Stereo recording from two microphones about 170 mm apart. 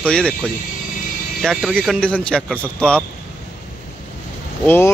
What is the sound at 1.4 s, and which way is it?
Speech, 5° left (ahead or behind).